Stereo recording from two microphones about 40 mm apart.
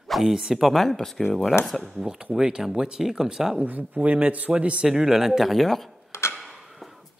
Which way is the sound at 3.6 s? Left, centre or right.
Right.